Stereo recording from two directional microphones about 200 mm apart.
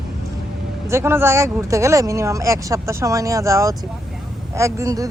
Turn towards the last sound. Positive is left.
turn(degrees=-15)  # may be behind; listen again after turning